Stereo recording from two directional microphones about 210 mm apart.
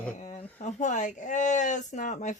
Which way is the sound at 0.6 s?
35° left (ahead or behind).